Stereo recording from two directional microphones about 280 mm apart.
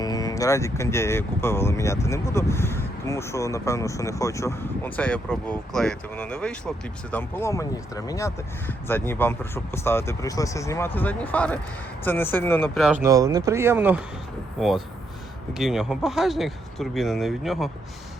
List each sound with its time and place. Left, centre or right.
0.0 s speech: centre
15.5 s speech: centre